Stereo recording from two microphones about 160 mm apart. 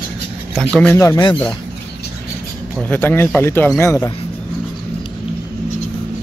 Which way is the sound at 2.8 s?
10° left (ahead or behind).